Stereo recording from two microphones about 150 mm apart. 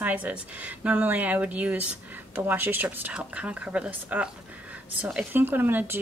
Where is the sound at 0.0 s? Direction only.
10° right (ahead or behind).